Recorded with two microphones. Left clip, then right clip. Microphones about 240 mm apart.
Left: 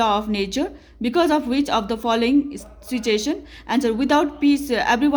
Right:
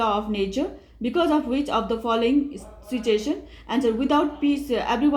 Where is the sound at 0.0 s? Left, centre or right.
Left.